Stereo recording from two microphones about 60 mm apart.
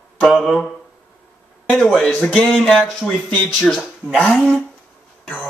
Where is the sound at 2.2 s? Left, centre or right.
Centre.